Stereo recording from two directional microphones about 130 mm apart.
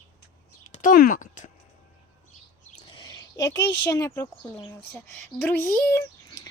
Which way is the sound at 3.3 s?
25° left (ahead or behind).